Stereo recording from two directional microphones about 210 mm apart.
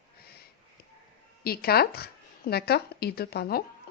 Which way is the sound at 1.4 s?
45° left (ahead or behind).